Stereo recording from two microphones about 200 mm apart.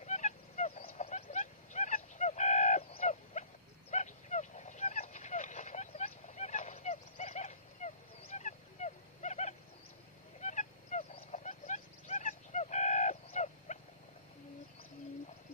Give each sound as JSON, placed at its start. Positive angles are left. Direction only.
{"t": 0.0, "sound": "fowl", "side_deg": 35}
{"t": 0.9, "sound": "a sound", "side_deg": 35}
{"t": 10.4, "sound": "fowl", "side_deg": 35}